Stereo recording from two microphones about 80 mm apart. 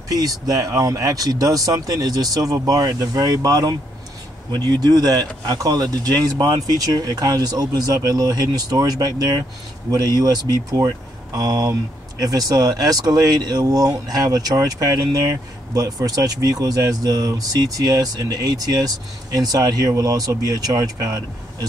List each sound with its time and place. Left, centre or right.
0.1 s speech: right